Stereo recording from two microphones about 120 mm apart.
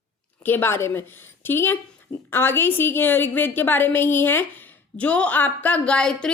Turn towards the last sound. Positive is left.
turn(degrees=5)  # may be behind; listen again after turning